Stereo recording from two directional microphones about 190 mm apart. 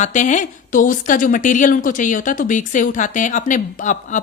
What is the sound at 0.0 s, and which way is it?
A woman's voice, 40° left (ahead or behind).